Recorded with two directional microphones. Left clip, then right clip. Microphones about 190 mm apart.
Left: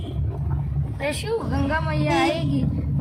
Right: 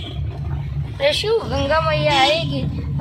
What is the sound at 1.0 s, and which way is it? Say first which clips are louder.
Speech: right 8 dB; 10° right (ahead or behind).